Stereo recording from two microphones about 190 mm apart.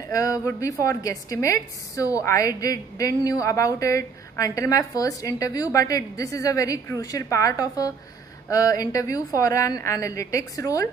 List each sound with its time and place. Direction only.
0.1 s a woman's voice: 15° left (ahead or behind)